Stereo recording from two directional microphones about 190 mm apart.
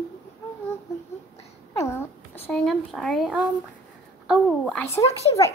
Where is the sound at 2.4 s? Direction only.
5° left (ahead or behind).